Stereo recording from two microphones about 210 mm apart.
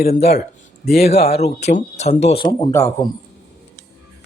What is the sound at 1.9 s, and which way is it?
A man's voice, 30° left (ahead or behind).